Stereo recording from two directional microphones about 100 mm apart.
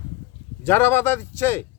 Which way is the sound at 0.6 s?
25° left (ahead or behind).